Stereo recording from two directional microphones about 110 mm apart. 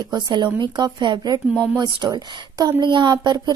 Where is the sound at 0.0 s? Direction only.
40° right (ahead or behind).